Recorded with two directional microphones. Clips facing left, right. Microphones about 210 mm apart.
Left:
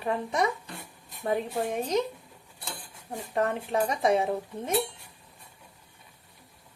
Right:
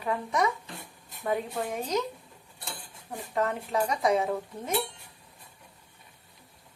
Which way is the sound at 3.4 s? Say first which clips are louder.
Left 1 dB; 30° left (ahead or behind).